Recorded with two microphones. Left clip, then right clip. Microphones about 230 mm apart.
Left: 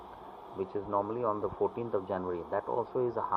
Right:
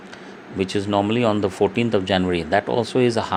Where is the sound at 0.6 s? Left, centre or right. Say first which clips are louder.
Right 11 dB; right.